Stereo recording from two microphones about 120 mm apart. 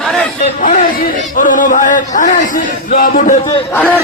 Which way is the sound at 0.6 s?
90° left.